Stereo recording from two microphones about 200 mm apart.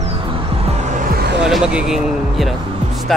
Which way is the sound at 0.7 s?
35° right (ahead or behind).